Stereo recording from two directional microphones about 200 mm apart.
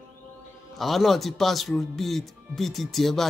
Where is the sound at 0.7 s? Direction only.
Centre (ahead or behind).